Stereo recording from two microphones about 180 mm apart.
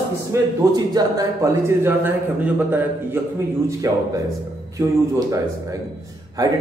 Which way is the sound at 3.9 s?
20° right (ahead or behind).